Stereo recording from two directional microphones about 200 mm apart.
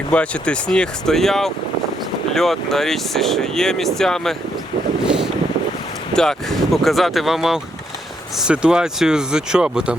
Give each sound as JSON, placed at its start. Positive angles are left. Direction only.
{"t": 0.1, "sound": "speech", "side_deg": 5}
{"t": 5.0, "sound": "boat", "side_deg": -5}
{"t": 6.1, "sound": "speech", "side_deg": 0}